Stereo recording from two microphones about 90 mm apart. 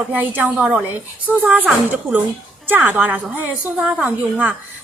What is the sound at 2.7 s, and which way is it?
A woman's voice, 20° right (ahead or behind).